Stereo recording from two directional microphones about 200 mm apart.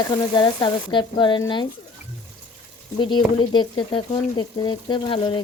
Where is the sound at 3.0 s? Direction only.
25° left (ahead or behind).